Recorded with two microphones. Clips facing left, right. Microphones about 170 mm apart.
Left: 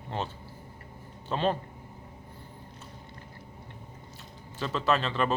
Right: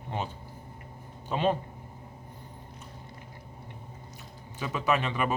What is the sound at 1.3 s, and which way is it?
Speech, 15° right (ahead or behind).